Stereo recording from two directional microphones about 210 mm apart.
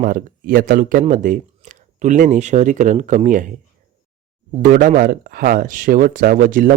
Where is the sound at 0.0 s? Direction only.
40° right (ahead or behind).